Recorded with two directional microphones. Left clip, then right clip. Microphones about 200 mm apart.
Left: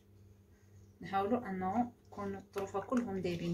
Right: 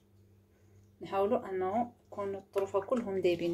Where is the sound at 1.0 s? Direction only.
25° right (ahead or behind).